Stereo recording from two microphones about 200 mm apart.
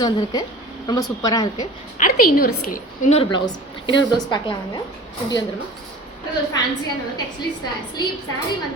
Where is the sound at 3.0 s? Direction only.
35° left (ahead or behind).